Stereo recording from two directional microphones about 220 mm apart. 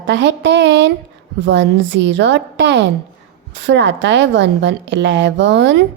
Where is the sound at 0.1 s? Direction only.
55° right (ahead or behind).